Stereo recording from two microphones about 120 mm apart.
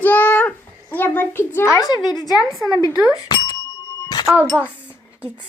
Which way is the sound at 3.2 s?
35° left (ahead or behind).